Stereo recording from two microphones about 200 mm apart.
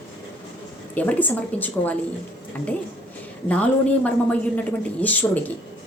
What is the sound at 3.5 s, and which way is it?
Speech, 5° left (ahead or behind).